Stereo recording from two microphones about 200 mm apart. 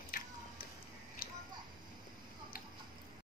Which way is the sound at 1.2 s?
50° left (ahead or behind).